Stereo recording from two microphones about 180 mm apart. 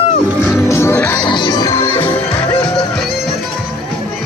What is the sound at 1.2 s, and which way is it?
Music, 25° left (ahead or behind).